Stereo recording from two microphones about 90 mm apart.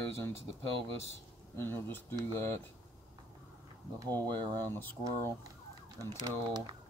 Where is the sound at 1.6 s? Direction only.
25° left (ahead or behind).